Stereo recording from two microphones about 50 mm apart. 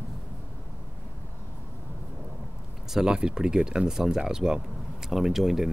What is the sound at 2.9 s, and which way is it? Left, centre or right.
Speech, centre.